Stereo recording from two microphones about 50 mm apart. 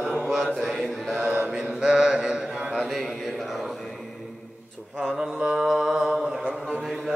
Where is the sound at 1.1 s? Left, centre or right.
Right; by 2.6 s centre.